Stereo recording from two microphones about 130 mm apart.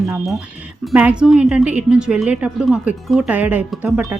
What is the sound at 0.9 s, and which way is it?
A woman's voice, 10° right (ahead or behind).